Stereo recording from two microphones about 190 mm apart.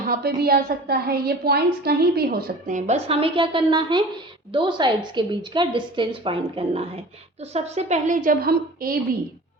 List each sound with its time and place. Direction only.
0.3 s a woman's voice: 55° right (ahead or behind)